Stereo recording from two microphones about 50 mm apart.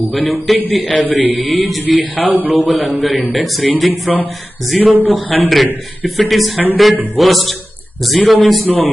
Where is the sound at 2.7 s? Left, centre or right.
Centre.